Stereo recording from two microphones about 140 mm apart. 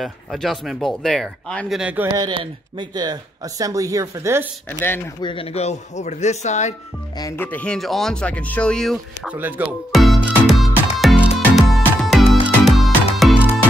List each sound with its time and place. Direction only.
0.0 s speech: centre (ahead or behind)
1.8 s a man's voice: 10° right (ahead or behind)
2.1 s speech: 35° right (ahead or behind)
4.6 s speech: 15° left (ahead or behind)
5.2 s a man's voice: 40° left (ahead or behind)
7.3 s speech: 10° left (ahead or behind)
9.4 s speech: 10° right (ahead or behind)
10.4 s music: centre (ahead or behind)